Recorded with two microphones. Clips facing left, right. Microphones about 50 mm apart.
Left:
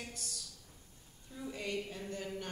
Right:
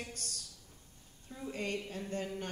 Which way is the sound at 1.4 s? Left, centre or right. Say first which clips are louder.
Right 1 dB; right.